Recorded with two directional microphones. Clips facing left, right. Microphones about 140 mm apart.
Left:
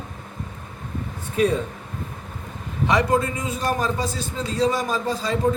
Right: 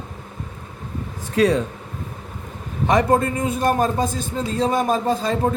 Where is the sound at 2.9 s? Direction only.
50° right (ahead or behind).